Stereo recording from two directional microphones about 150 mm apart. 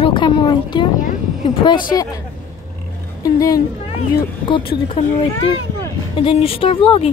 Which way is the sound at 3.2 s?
25° left (ahead or behind).